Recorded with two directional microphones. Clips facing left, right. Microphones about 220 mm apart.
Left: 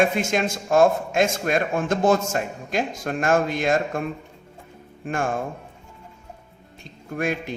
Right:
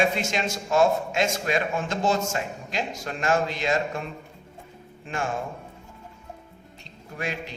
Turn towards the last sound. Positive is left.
turn(degrees=50)  # may be behind; listen again after turning